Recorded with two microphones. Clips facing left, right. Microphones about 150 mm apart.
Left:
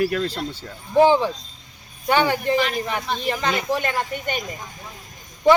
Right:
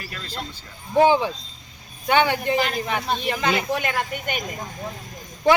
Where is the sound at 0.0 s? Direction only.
75° left (ahead or behind).